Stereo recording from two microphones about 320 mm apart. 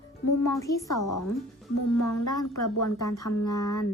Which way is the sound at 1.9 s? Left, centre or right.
Left.